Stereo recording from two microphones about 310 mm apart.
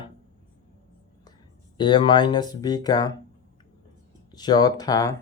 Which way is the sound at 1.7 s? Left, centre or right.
Centre.